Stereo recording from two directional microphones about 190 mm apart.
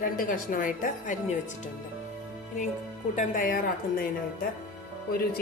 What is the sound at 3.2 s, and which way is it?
Speech, 45° left (ahead or behind).